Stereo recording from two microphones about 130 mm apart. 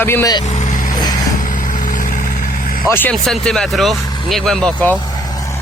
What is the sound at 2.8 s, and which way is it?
Speech, 15° left (ahead or behind).